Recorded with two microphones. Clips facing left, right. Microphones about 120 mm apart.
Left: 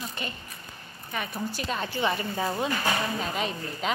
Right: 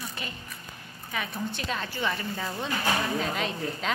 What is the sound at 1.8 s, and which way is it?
Speech, 20° left (ahead or behind).